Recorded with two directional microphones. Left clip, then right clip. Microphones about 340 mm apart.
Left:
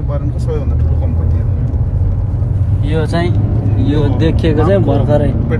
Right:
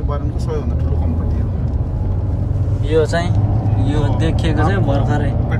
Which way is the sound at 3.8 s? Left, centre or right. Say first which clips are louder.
Left 6 dB; left.